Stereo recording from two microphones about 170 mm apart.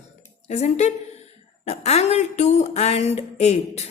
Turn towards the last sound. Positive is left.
turn(degrees=40)  # may be behind; listen again after turning